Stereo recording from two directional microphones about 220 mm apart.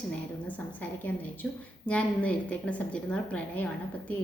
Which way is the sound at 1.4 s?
5° left (ahead or behind).